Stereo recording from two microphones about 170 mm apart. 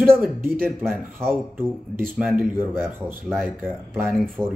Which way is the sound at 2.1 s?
10° right (ahead or behind).